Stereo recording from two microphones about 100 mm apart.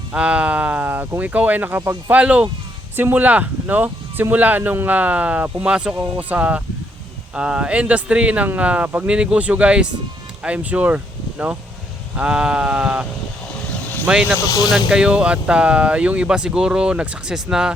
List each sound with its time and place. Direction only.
0.1 s speech: 10° right (ahead or behind)
14.3 s speech: 35° left (ahead or behind)
14.7 s speech: 5° right (ahead or behind)